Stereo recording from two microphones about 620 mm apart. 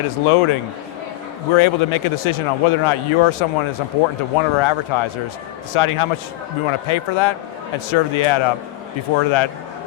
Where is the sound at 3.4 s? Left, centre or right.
Left.